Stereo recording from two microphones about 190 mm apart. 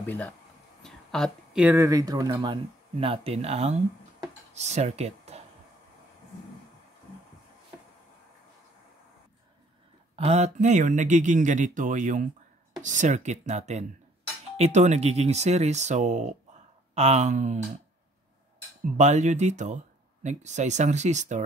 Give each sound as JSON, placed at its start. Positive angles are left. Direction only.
{"t": 0.0, "sound": "speech", "side_deg": 10}
{"t": 10.1, "sound": "speech", "side_deg": -35}
{"t": 18.9, "sound": "speech", "side_deg": -35}